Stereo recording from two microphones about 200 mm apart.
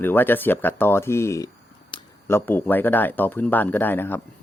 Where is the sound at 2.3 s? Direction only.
10° left (ahead or behind).